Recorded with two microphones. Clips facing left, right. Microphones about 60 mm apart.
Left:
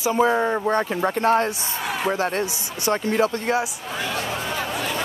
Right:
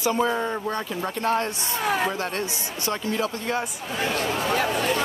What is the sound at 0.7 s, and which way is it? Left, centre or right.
Speech, left.